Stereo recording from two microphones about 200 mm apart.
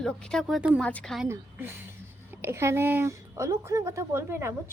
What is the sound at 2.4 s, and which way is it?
A woman's voice, 10° right (ahead or behind).